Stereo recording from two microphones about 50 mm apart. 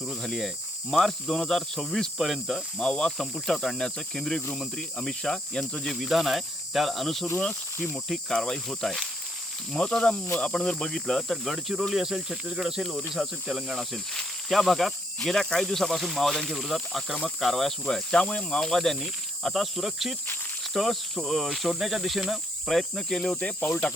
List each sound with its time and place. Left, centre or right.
0.0 s speech: centre
2.7 s speech: centre
3.2 s speech: centre
6.0 s speech: centre
9.7 s speech: centre
13.9 s speech: centre